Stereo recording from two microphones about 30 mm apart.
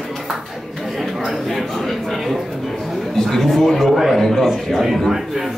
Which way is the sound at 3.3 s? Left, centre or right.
Centre.